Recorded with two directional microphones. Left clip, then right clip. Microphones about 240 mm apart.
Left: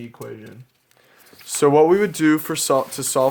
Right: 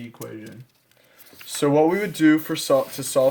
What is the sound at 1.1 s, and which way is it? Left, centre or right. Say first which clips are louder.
Speech: left 3 dB; left.